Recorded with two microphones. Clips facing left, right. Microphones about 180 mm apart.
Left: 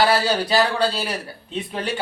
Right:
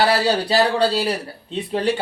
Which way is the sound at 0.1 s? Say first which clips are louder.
Right 1 dB; 35° right (ahead or behind).